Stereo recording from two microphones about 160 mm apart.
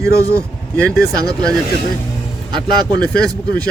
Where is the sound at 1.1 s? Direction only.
25° right (ahead or behind).